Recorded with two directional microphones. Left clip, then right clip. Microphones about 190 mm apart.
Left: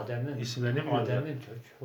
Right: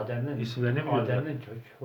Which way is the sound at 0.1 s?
Centre (ahead or behind).